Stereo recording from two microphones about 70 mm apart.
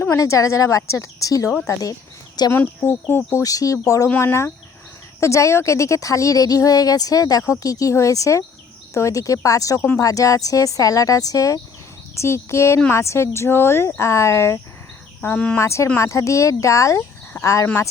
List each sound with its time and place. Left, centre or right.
0.2 s speech: left
1.8 s a sound: left
2.5 s speech: left
3.4 s speech: left
4.2 s speech: left
7.4 s speech: left
12.1 s speech: left